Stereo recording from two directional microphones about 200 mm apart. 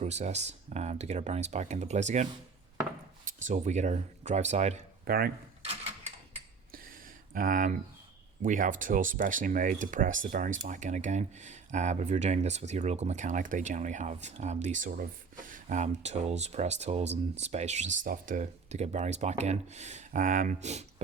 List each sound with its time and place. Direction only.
0.0 s speech: 35° right (ahead or behind)
3.3 s speech: 35° right (ahead or behind)
5.0 s speech: 50° right (ahead or behind)
6.7 s a sound: 45° right (ahead or behind)
8.4 s speech: 40° right (ahead or behind)